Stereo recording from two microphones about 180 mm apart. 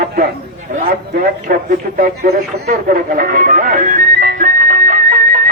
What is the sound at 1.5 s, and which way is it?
Speech, 55° right (ahead or behind).